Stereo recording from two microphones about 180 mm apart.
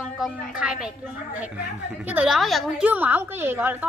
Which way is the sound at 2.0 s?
10° right (ahead or behind).